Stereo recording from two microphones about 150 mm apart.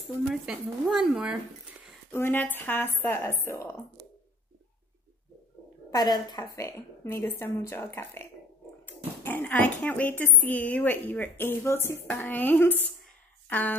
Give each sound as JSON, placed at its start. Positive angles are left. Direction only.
{"t": 0.3, "sound": "speech", "side_deg": 0}
{"t": 2.0, "sound": "speech", "side_deg": 15}
{"t": 5.9, "sound": "a woman's voice", "side_deg": 25}